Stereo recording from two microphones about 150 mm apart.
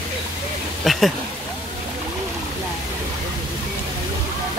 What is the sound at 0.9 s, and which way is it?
Speech, centre (ahead or behind).